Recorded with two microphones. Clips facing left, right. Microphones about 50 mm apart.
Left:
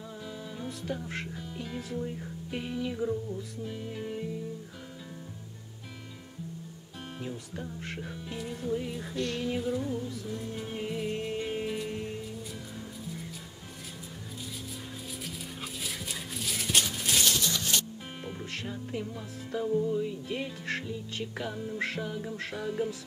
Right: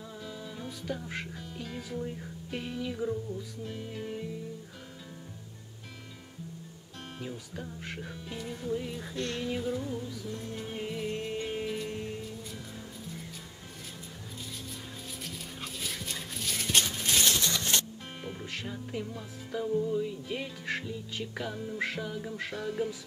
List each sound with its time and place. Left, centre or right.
0.2 s music: centre
7.2 s music: centre
15.2 s dog: centre
17.2 s a sound: right
18.2 s music: centre